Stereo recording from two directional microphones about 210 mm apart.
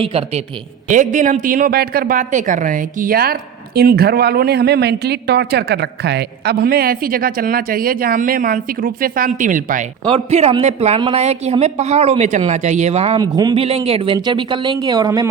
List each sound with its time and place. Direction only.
0.0 s speech: 30° right (ahead or behind)
13.1 s speech: 20° right (ahead or behind)